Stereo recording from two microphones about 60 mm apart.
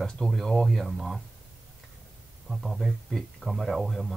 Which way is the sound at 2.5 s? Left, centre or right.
Centre.